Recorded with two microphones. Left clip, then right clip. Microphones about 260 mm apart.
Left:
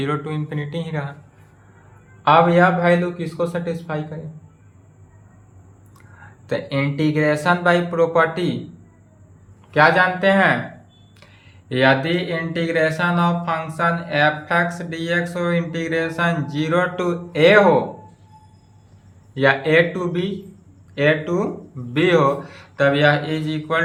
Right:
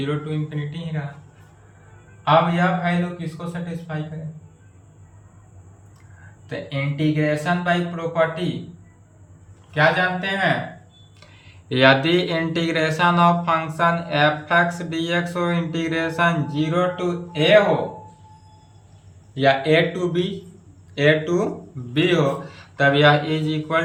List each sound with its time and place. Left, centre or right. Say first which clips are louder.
0.0 s speech: left 2 dB; centre
2.2 s speech: left 4 dB; left
6.5 s speech: left 6 dB; centre
9.7 s speech: left 4 dB; centre
11.7 s speech: right 1 dB; centre
19.3 s speech: left 1 dB; centre